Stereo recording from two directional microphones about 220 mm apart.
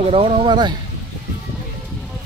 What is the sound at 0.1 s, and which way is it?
Speech, 25° right (ahead or behind).